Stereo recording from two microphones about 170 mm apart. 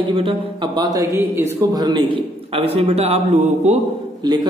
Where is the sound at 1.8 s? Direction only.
30° right (ahead or behind).